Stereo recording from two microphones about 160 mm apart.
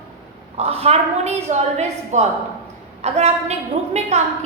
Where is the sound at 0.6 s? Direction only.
40° right (ahead or behind).